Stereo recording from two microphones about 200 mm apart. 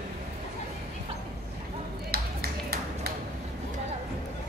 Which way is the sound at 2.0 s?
50° right (ahead or behind).